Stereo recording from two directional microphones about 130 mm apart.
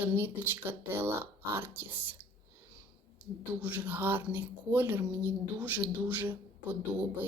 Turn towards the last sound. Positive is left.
turn(degrees=-15)  # may be behind; listen again after turning